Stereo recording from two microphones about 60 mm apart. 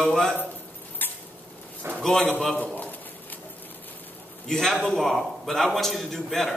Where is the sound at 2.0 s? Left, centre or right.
Centre.